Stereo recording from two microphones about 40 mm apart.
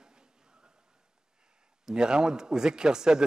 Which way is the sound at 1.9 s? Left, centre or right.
Centre.